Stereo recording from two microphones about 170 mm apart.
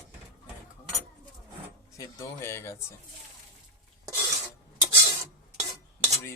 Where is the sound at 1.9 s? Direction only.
15° left (ahead or behind).